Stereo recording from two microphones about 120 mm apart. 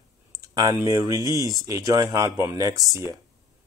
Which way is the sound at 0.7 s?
25° right (ahead or behind).